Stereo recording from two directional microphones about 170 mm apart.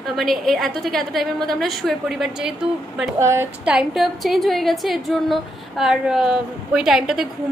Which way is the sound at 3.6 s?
Centre (ahead or behind).